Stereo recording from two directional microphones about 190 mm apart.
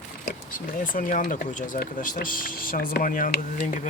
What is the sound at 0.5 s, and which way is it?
Speech, 45° left (ahead or behind).